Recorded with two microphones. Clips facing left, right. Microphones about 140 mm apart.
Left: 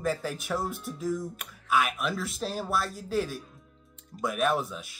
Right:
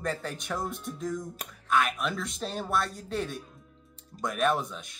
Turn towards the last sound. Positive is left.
turn(degrees=5)  # may be behind; listen again after turning